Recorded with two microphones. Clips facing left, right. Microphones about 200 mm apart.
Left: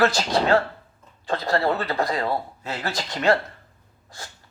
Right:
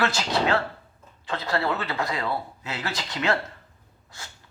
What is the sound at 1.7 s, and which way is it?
Speech, 35° left (ahead or behind).